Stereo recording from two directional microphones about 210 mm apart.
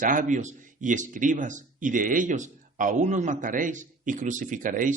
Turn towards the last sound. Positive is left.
turn(degrees=-40)  # may be behind; listen again after turning